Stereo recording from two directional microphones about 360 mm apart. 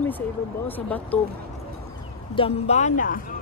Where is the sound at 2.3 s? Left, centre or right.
Centre.